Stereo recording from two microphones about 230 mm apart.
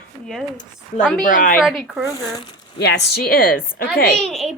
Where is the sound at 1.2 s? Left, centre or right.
Left.